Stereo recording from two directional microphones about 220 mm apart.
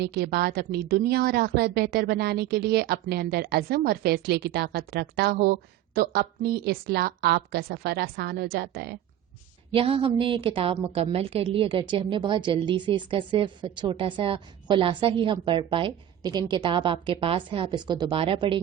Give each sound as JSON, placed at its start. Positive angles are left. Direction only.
{"t": 0.0, "sound": "a woman's voice", "side_deg": -45}
{"t": 9.7, "sound": "a woman's voice", "side_deg": -25}